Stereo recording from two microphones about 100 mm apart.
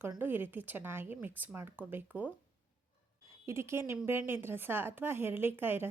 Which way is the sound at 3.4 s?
25° right (ahead or behind).